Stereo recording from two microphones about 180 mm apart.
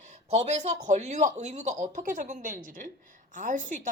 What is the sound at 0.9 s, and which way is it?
A woman's voice, 40° right (ahead or behind).